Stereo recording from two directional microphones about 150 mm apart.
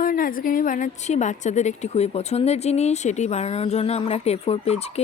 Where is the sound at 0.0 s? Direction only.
70° left (ahead or behind).